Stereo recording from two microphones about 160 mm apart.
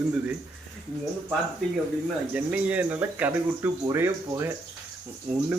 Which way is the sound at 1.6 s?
5° left (ahead or behind).